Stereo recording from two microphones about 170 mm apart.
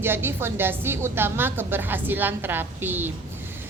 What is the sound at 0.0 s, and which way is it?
A woman's voice, 15° right (ahead or behind).